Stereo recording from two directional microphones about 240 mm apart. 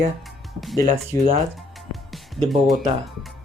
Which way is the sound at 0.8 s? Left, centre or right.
Right.